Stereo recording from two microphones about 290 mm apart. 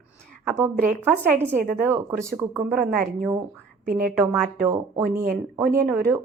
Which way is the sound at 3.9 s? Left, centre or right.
Right.